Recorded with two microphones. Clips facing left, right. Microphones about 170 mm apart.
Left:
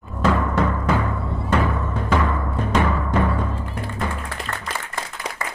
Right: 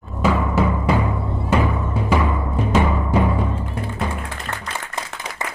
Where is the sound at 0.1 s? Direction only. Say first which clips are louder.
Right 1 dB; 5° right (ahead or behind).